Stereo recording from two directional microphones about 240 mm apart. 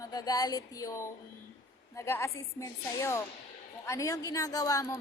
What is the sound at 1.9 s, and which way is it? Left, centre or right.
A woman's voice, centre.